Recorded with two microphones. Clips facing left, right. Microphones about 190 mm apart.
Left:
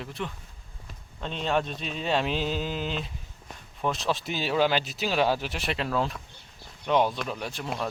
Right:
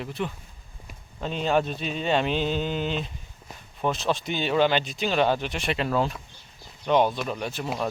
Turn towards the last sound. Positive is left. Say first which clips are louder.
# right 3 dB
turn(degrees=0)  # may be behind; listen again after turning